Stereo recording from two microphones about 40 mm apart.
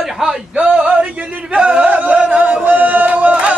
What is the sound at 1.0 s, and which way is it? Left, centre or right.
Chant, right.